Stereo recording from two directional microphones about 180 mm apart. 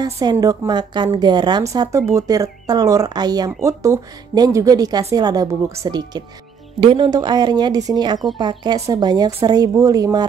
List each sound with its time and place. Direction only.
0.0 s a woman's voice: 20° right (ahead or behind)